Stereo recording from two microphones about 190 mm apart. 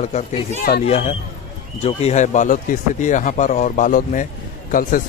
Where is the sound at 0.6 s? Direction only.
50° left (ahead or behind).